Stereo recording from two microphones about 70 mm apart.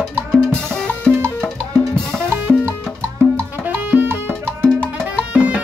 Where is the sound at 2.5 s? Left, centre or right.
Centre.